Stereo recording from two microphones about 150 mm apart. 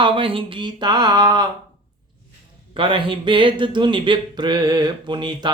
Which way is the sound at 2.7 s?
35° right (ahead or behind).